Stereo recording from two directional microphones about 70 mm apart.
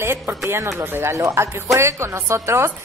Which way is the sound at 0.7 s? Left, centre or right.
Right.